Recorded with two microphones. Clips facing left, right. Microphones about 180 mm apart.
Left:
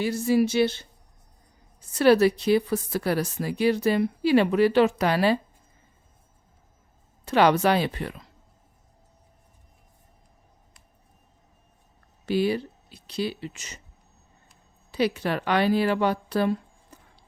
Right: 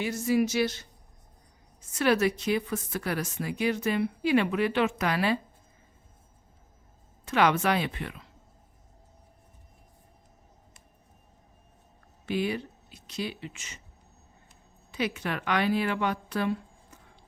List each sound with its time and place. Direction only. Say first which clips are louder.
0.0 s speech: left 4 dB; 35° left (ahead or behind)
7.3 s speech: left 5 dB; 35° left (ahead or behind)
12.2 s speech: left 5 dB; 35° left (ahead or behind)
14.9 s speech: left 6 dB; 35° left (ahead or behind)